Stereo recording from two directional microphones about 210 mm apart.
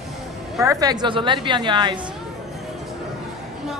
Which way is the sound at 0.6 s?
15° right (ahead or behind).